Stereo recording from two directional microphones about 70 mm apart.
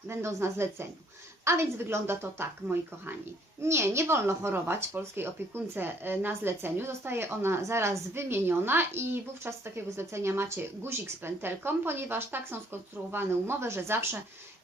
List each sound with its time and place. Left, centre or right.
0.1 s speech: right